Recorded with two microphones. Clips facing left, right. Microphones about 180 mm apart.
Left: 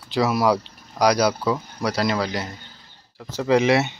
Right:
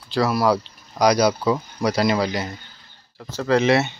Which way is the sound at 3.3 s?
15° left (ahead or behind).